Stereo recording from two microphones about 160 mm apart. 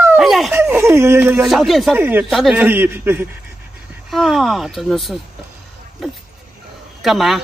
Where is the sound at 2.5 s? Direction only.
10° right (ahead or behind).